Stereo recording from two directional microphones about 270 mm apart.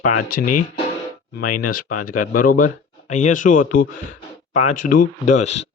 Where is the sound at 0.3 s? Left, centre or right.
Left.